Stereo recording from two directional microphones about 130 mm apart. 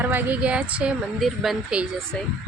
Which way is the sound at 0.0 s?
15° right (ahead or behind).